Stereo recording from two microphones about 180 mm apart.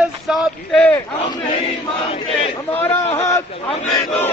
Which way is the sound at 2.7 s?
10° left (ahead or behind).